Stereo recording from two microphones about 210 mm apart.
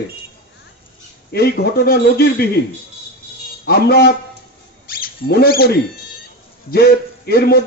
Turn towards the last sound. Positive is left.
turn(degrees=45)  # may be behind; listen again after turning